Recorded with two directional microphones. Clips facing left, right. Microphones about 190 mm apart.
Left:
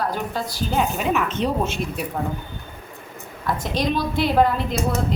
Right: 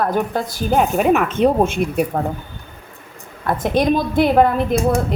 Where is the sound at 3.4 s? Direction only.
55° right (ahead or behind).